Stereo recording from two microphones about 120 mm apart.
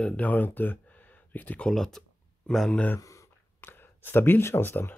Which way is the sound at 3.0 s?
20° left (ahead or behind).